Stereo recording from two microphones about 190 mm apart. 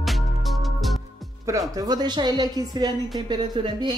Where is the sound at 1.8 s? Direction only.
20° right (ahead or behind).